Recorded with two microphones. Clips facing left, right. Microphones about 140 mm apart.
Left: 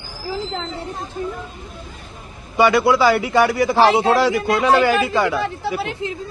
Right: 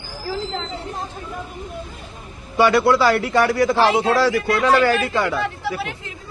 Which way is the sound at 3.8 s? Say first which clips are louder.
Left 5 dB; 35° left (ahead or behind).